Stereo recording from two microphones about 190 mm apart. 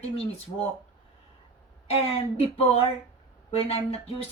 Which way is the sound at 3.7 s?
30° left (ahead or behind).